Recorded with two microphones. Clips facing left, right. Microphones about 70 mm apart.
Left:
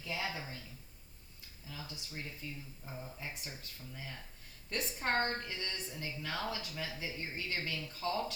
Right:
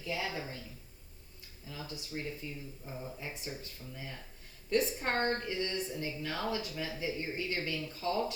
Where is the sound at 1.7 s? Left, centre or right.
Right.